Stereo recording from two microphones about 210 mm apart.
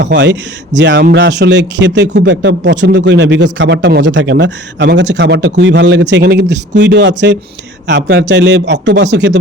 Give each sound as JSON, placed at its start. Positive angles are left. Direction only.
{"t": 0.0, "sound": "speech", "side_deg": -55}